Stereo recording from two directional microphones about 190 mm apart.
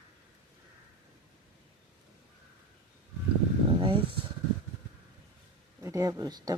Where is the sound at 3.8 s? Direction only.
25° right (ahead or behind).